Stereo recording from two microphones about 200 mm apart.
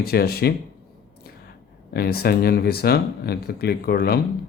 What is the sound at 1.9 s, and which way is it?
Speech, 50° left (ahead or behind).